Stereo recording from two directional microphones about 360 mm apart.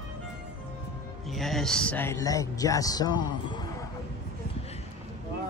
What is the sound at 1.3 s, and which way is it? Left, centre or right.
Speech, centre.